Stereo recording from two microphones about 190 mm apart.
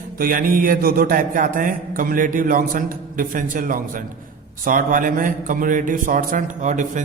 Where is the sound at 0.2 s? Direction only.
50° right (ahead or behind).